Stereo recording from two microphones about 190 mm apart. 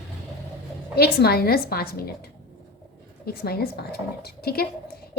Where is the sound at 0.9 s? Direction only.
55° left (ahead or behind).